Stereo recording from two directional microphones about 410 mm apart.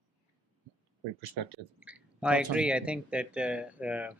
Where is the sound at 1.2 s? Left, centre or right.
Right.